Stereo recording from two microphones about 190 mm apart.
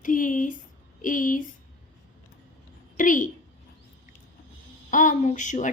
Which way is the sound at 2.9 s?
45° left (ahead or behind).